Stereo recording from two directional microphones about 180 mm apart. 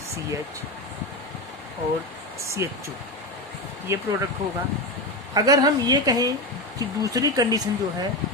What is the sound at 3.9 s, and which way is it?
Speech, 15° right (ahead or behind).